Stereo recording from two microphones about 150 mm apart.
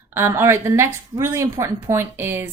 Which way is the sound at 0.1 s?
15° right (ahead or behind).